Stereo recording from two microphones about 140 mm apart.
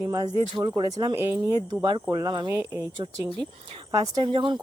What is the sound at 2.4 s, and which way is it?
Speech, 15° right (ahead or behind).